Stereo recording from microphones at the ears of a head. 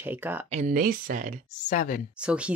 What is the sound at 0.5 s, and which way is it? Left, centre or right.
Speech, right.